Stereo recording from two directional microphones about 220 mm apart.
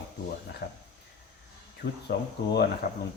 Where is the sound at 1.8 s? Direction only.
40° left (ahead or behind).